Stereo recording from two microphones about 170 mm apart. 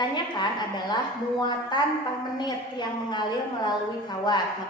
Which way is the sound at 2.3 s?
25° left (ahead or behind).